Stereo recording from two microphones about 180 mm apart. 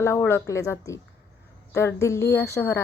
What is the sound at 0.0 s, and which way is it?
A woman's voice, 15° left (ahead or behind).